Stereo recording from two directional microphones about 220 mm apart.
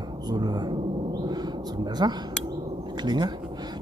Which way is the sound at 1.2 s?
20° right (ahead or behind).